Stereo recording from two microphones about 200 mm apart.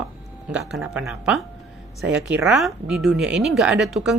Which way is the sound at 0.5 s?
5° right (ahead or behind).